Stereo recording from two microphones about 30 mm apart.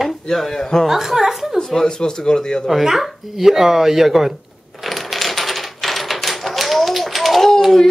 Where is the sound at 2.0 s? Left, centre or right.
Left.